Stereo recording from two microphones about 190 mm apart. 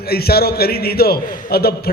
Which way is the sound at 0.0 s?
55° left (ahead or behind).